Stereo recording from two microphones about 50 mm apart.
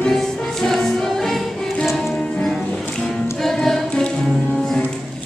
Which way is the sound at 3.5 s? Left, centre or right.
Centre.